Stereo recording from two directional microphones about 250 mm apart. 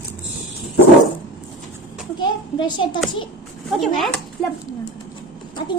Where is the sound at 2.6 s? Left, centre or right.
Centre.